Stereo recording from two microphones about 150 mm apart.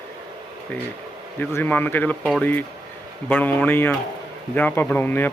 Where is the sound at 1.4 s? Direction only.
15° left (ahead or behind).